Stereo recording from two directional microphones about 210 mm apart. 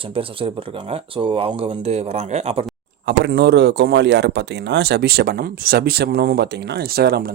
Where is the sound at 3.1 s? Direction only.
50° right (ahead or behind).